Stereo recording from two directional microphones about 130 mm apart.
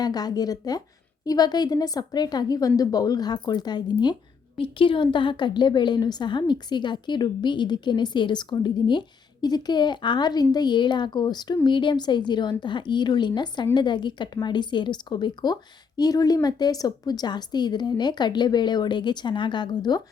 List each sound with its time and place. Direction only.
0.0 s a woman's voice: 30° left (ahead or behind)
4.5 s a woman's voice: 45° left (ahead or behind)